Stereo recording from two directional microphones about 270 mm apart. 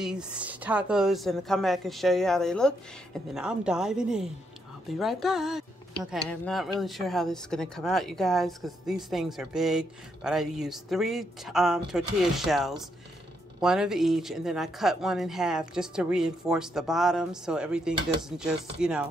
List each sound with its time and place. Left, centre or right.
0.0 s speech: centre